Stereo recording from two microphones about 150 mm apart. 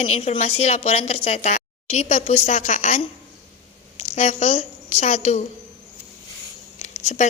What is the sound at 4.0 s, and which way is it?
A woman's voice, 50° left (ahead or behind).